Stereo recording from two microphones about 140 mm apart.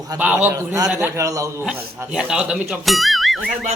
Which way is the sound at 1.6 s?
10° right (ahead or behind).